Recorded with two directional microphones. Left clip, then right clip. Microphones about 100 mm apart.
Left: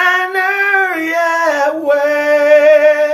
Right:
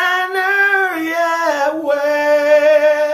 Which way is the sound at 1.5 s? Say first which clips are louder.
Left 3 dB; 90° right.